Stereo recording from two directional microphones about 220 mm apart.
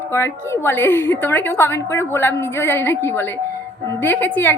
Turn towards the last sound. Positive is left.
turn(degrees=10)  # may be behind; listen again after turning